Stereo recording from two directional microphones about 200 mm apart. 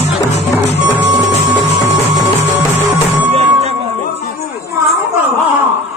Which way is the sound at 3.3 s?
30° right (ahead or behind).